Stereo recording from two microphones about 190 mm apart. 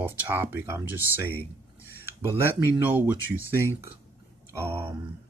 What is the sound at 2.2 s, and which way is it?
Speech, 15° right (ahead or behind).